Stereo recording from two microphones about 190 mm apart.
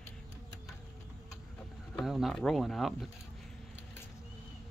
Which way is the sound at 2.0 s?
Centre (ahead or behind).